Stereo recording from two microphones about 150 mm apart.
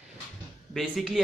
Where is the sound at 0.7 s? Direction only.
Centre (ahead or behind).